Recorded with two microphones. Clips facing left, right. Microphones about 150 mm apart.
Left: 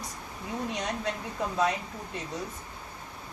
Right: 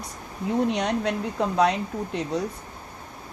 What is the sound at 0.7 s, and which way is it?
Speech, 65° right (ahead or behind).